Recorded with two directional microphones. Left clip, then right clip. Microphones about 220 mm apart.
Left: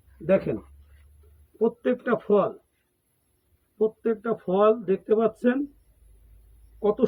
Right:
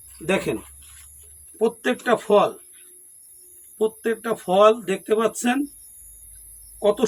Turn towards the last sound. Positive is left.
turn(degrees=-20)  # may be behind; listen again after turning